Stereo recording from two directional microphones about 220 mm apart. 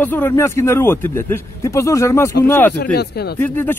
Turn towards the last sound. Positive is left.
turn(degrees=10)  # may be behind; listen again after turning